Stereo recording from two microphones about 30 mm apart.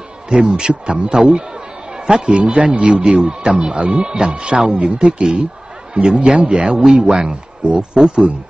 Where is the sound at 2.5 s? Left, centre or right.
Right.